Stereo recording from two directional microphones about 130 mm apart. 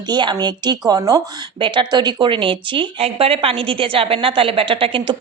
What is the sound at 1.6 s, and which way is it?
A woman's voice, 40° right (ahead or behind).